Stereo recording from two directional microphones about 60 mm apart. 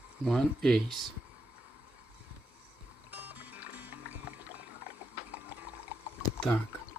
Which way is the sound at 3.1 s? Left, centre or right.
Right.